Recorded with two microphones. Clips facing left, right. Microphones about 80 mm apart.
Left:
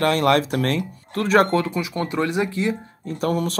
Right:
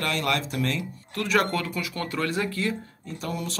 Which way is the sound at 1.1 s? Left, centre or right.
Left.